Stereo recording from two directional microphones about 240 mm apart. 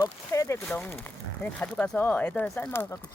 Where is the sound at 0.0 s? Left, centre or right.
Centre.